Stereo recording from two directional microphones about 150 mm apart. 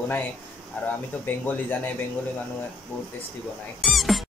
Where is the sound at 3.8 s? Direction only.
Centre (ahead or behind).